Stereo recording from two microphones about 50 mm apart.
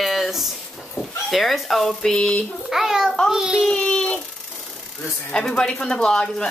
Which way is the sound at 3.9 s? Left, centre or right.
Left.